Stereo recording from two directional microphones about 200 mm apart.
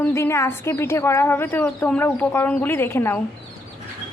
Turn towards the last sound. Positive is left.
turn(degrees=10)  # may be behind; listen again after turning